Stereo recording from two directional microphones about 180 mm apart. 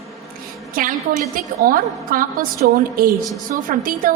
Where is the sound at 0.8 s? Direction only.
50° right (ahead or behind).